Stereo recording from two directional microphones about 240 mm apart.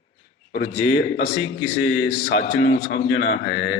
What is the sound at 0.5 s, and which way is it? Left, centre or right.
Speech, left.